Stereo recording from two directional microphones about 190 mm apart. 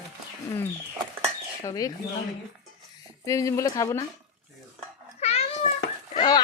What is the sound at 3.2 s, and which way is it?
Speech, 15° left (ahead or behind).